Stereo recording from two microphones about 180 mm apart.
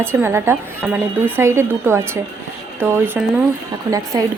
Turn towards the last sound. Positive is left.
turn(degrees=-20)  # may be behind; listen again after turning